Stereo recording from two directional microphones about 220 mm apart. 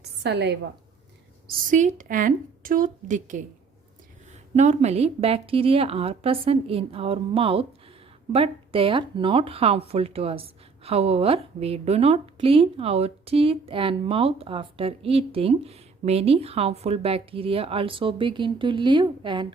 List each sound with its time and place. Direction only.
0.2 s a woman's voice: 50° right (ahead or behind)
1.5 s a woman's voice: 35° right (ahead or behind); by 19.5 s 20° right (ahead or behind)